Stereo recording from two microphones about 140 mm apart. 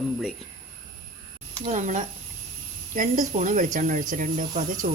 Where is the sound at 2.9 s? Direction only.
70° right (ahead or behind).